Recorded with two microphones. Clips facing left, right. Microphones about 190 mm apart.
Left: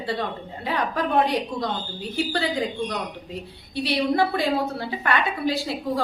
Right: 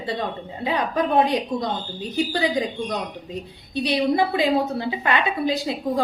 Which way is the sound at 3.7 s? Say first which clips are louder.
Right 2 dB; 15° right (ahead or behind).